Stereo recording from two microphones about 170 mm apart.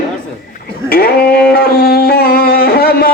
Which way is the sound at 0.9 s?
60° left (ahead or behind).